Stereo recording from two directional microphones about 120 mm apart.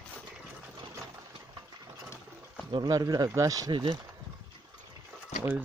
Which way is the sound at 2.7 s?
35° right (ahead or behind).